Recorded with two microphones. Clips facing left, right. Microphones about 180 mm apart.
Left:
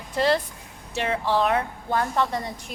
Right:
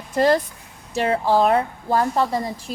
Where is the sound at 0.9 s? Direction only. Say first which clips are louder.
Right 5 dB; 40° right (ahead or behind).